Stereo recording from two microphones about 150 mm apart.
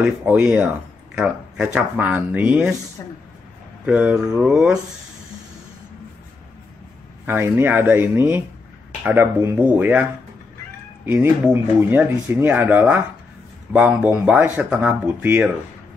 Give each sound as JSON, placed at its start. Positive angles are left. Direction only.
{"t": 0.0, "sound": "speech", "side_deg": -10}
{"t": 3.0, "sound": "speech", "side_deg": 25}
{"t": 3.8, "sound": "speech", "side_deg": -5}
{"t": 7.2, "sound": "speech", "side_deg": -15}
{"t": 11.1, "sound": "speech", "side_deg": -15}